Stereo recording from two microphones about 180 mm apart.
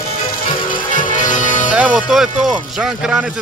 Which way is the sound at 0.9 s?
45° left (ahead or behind).